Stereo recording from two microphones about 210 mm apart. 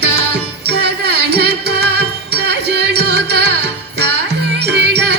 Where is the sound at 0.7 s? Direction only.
50° right (ahead or behind).